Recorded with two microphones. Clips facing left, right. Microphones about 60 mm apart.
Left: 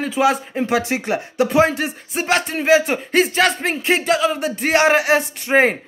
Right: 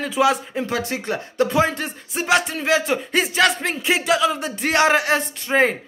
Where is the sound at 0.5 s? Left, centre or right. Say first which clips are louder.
Left 5 dB; left; by 5.3 s centre.